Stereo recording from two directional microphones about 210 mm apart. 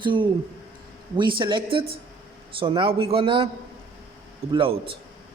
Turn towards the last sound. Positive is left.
turn(degrees=-25)  # may be behind; listen again after turning